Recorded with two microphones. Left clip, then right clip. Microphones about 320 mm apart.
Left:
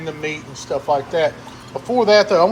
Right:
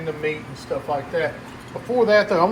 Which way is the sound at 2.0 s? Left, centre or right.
Centre.